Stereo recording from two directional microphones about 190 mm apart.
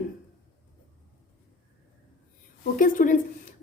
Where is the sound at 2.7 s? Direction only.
45° left (ahead or behind).